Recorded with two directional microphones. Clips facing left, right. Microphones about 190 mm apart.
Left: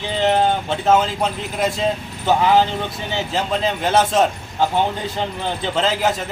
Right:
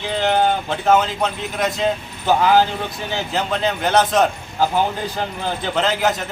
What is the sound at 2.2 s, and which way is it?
Speech, centre (ahead or behind).